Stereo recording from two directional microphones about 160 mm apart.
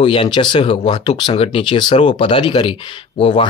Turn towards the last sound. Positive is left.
turn(degrees=30)  # may be behind; listen again after turning